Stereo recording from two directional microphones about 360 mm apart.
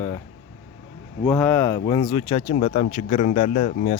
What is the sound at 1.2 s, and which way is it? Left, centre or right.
Speech, centre.